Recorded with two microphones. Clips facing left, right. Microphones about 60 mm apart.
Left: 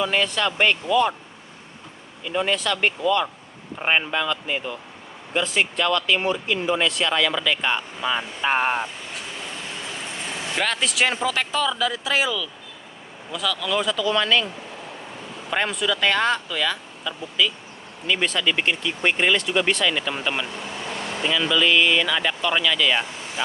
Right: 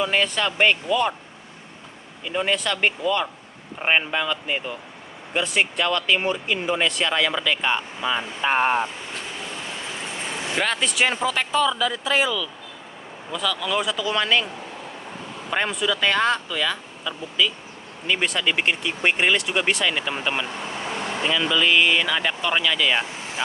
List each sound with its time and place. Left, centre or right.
0.0 s speech: centre
2.2 s speech: centre
10.5 s speech: centre
15.5 s speech: centre